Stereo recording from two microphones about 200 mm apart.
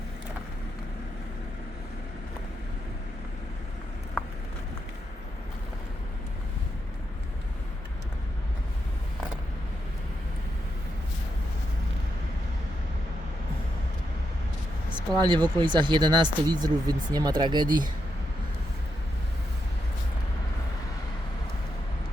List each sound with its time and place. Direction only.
15.2 s speech: 20° right (ahead or behind)